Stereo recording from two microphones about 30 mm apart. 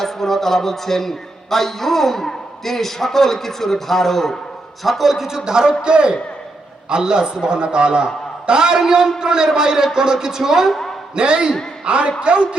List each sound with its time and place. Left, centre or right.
0.0 s a man's voice: centre
5.5 s a man's voice: right
11.1 s a man's voice: right